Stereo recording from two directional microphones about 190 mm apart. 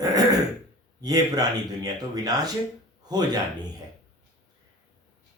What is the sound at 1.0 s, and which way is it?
A man's voice, 20° right (ahead or behind).